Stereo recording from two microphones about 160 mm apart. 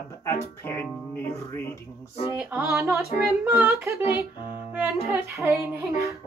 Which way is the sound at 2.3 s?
10° right (ahead or behind).